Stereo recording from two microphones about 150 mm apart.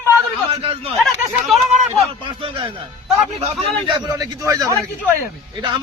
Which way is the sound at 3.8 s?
25° right (ahead or behind).